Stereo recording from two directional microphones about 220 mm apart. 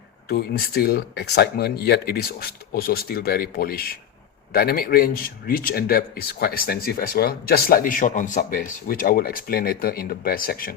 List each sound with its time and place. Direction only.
0.3 s speech: 45° left (ahead or behind)